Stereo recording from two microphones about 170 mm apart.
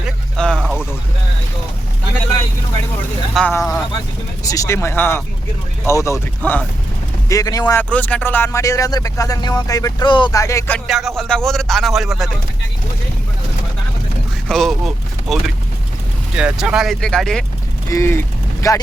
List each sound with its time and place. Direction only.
0.0 s a sound: 5° left (ahead or behind)
3.3 s speech: 5° left (ahead or behind)
7.3 s speech: 20° left (ahead or behind)
7.8 s speech: 10° left (ahead or behind)
10.8 s speech: centre (ahead or behind)
14.4 s speech: centre (ahead or behind)
17.8 s speech: 15° left (ahead or behind)